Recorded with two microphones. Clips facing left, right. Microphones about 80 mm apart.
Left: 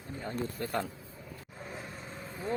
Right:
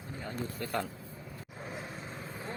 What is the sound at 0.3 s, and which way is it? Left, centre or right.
Speech, left.